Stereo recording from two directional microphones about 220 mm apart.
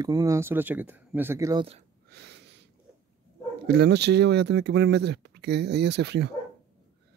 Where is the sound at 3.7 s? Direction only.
50° right (ahead or behind).